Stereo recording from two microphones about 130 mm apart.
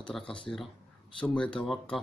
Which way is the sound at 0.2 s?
40° left (ahead or behind).